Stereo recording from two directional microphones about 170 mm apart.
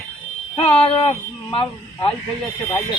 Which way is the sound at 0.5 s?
30° left (ahead or behind).